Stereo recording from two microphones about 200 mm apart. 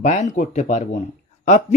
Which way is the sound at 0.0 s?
35° left (ahead or behind).